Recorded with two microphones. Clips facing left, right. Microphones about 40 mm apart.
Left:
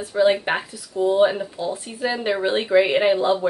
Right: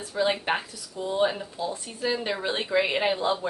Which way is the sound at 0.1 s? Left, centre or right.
Centre.